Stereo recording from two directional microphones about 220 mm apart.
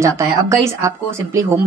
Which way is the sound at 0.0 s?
15° right (ahead or behind).